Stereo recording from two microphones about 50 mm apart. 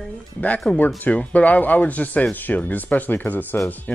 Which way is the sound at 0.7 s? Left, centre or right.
Left.